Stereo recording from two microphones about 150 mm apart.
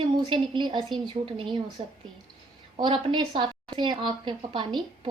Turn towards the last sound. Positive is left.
turn(degrees=-30)  # may be behind; listen again after turning